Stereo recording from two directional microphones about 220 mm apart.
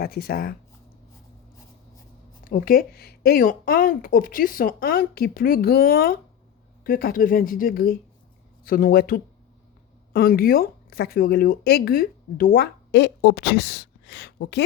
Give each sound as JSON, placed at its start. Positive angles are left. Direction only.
{"t": 0.0, "sound": "speech", "side_deg": 45}
{"t": 2.5, "sound": "speech", "side_deg": 40}